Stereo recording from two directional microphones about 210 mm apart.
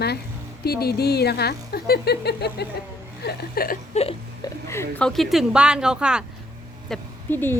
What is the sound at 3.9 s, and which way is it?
Crying, 30° left (ahead or behind).